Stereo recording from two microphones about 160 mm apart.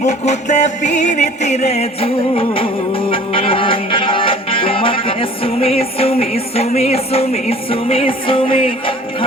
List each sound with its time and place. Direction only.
0.0 s music: 45° left (ahead or behind)